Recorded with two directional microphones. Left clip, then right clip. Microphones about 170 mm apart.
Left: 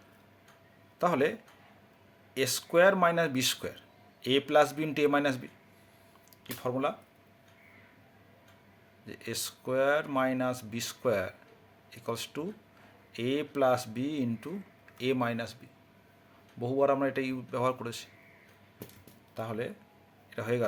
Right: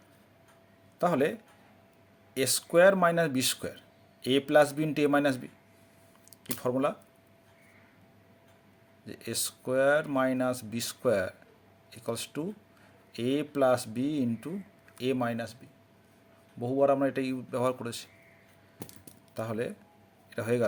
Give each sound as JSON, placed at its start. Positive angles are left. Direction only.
{"t": 0.9, "sound": "speech", "side_deg": -25}
{"t": 6.4, "sound": "speech", "side_deg": -40}
{"t": 9.0, "sound": "speech", "side_deg": -30}
{"t": 16.6, "sound": "speech", "side_deg": -20}
{"t": 19.3, "sound": "speech", "side_deg": -40}